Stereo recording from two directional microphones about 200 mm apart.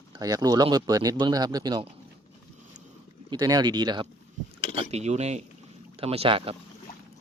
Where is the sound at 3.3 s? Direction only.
20° right (ahead or behind).